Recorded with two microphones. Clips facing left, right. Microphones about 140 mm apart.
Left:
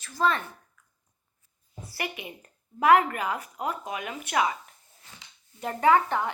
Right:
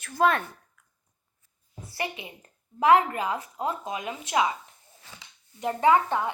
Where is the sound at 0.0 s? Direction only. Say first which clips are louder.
Right 3 dB; 60° right (ahead or behind).